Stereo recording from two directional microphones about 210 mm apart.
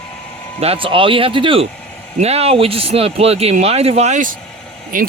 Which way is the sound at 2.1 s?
30° right (ahead or behind).